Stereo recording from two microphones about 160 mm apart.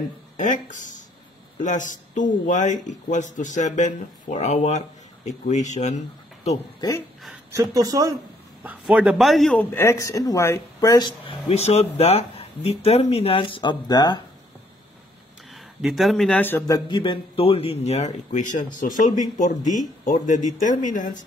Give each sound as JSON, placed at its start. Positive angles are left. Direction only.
{"t": 0.4, "sound": "speech", "side_deg": 50}
{"t": 7.5, "sound": "speech", "side_deg": -20}
{"t": 8.6, "sound": "a man's voice", "side_deg": -10}
{"t": 15.5, "sound": "speech", "side_deg": 0}